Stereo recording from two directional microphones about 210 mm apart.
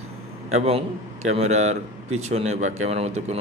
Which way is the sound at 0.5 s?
30° right (ahead or behind).